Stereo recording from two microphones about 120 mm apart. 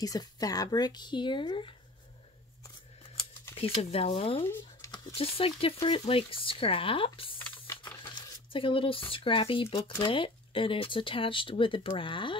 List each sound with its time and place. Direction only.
0.0 s speech: 30° left (ahead or behind)
3.5 s speech: 55° left (ahead or behind)
7.3 s a sound: 20° left (ahead or behind)
8.0 s speech: 45° left (ahead or behind)